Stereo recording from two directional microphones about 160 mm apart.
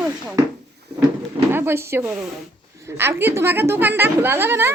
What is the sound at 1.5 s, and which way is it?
A woman's voice, 15° right (ahead or behind).